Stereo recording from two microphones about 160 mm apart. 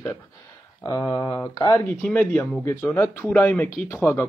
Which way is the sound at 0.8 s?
20° left (ahead or behind).